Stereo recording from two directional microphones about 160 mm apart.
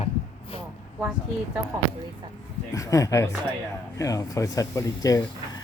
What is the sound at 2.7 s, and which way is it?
Speech, 20° left (ahead or behind).